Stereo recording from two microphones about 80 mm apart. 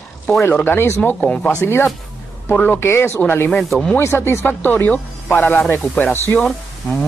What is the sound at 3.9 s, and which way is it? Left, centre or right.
Speech, left.